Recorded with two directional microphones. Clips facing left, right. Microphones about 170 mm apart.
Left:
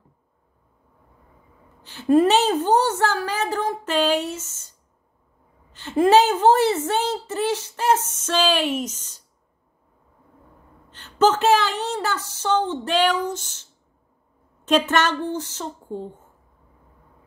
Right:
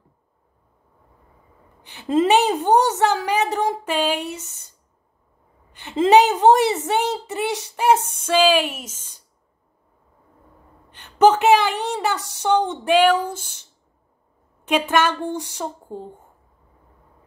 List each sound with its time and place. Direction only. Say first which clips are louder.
1.8 s a woman's voice: left 3 dB; 15° right (ahead or behind)
5.7 s a woman's voice: right 1 dB; 15° right (ahead or behind)
8.8 s a woman's voice: left 9 dB; 50° right (ahead or behind)
10.9 s a woman's voice: right 4 dB; 15° right (ahead or behind)